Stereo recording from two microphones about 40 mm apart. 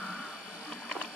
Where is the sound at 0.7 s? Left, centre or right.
Left.